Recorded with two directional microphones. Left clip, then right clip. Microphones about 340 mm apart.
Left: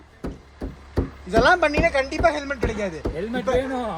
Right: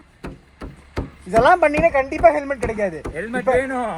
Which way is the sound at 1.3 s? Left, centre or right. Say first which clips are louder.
Right 3 dB; right.